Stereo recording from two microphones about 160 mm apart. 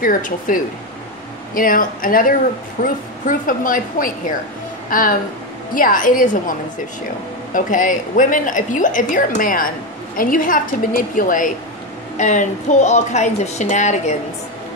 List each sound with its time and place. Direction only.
0.0 s a woman's voice: 55° left (ahead or behind)
7.5 s a woman's voice: 55° left (ahead or behind)